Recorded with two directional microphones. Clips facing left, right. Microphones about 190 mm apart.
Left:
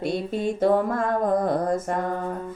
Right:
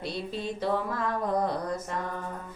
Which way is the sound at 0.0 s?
50° left (ahead or behind).